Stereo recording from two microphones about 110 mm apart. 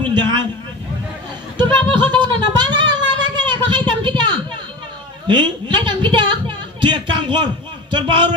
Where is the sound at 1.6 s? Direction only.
45° right (ahead or behind).